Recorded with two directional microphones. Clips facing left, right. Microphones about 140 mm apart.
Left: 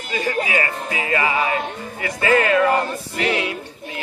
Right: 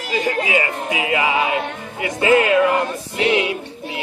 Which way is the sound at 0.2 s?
20° right (ahead or behind).